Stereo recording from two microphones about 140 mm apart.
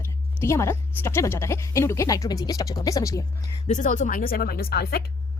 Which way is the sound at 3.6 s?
60° left (ahead or behind).